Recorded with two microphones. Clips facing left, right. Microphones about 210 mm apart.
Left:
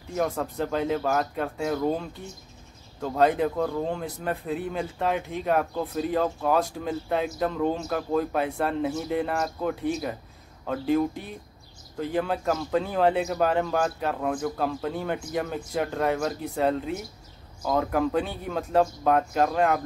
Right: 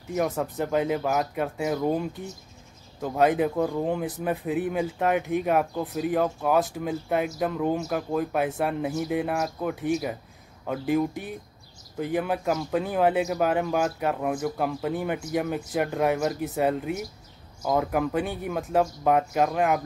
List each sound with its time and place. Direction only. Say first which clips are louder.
0.1 s speech: right 1 dB; 10° right (ahead or behind)